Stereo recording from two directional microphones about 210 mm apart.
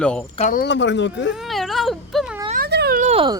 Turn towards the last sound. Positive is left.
turn(degrees=-25)  # may be behind; listen again after turning